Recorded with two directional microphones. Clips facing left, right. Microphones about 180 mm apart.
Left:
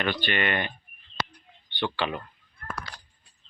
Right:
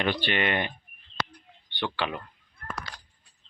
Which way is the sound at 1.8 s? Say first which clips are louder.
Left 2 dB; 5° right (ahead or behind).